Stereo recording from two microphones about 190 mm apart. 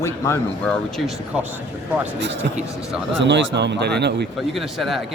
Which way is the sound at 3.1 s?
65° right (ahead or behind).